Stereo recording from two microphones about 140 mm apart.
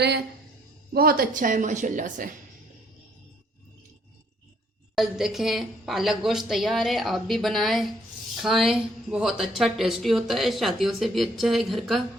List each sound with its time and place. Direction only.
0.9 s a woman's voice: 90° right; by 2.3 s 70° right (ahead or behind)
4.9 s speech: centre (ahead or behind)